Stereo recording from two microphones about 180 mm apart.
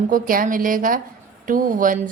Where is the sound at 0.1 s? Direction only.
50° right (ahead or behind).